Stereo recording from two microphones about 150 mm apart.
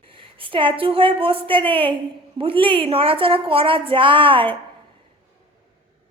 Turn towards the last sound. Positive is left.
turn(degrees=-35)  # may be behind; listen again after turning